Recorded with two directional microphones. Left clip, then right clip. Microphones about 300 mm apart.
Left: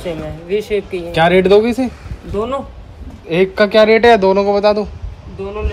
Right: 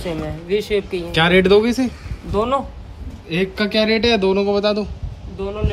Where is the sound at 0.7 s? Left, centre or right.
Centre.